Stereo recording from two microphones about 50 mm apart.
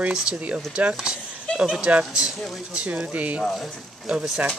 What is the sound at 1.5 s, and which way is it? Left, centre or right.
Speech, centre.